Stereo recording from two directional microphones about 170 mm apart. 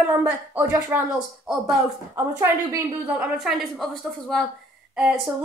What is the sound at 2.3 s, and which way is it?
A woman's voice, 10° right (ahead or behind).